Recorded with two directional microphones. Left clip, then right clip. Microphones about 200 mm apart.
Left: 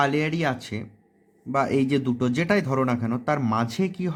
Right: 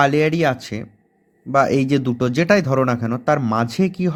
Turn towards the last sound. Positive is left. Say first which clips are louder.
# right 6 dB
turn(degrees=-30)  # may be behind; listen again after turning